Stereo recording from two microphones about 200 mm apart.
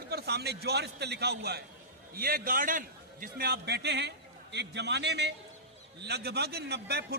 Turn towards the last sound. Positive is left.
turn(degrees=-55)  # may be behind; listen again after turning